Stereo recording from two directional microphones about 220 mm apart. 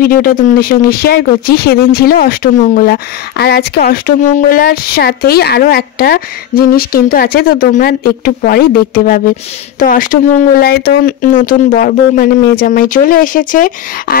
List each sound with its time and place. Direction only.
0.0 s speech: 40° left (ahead or behind)